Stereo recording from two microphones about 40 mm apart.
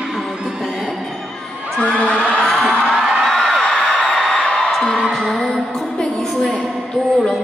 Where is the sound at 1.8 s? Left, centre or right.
Left.